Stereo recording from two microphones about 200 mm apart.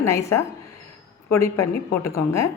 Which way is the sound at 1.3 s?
15° left (ahead or behind).